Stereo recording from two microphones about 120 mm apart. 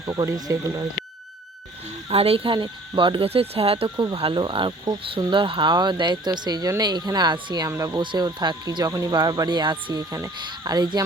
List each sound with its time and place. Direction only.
0.2 s speech: 30° right (ahead or behind)
2.0 s speech: 55° right (ahead or behind)
7.7 s speech: 25° right (ahead or behind)
8.0 s speech: 40° right (ahead or behind)